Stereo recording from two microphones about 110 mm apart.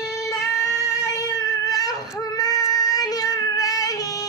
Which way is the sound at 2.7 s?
35° left (ahead or behind).